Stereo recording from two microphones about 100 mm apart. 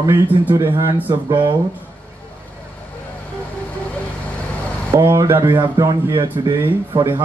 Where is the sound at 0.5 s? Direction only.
25° right (ahead or behind).